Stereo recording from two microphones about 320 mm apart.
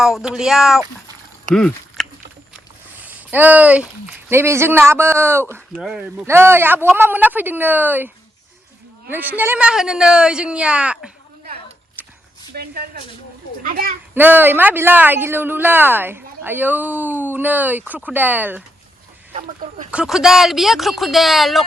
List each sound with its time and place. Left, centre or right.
0.0 s speech: centre
1.5 s oink: centre
3.0 s a man's voice: centre
12.0 s a sound: centre
12.5 s speech: right
14.1 s speech: centre
19.3 s speech: right
19.9 s speech: centre